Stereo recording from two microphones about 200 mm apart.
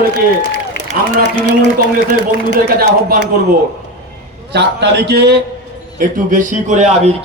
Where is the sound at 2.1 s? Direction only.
45° right (ahead or behind).